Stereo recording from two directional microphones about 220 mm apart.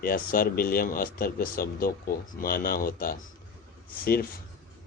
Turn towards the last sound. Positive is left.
turn(degrees=45)  # may be behind; listen again after turning